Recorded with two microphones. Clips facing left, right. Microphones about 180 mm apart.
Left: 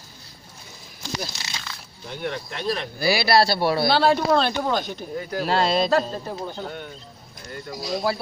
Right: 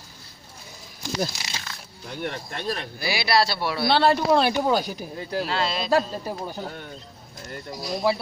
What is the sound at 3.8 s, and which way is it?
Speech, centre (ahead or behind).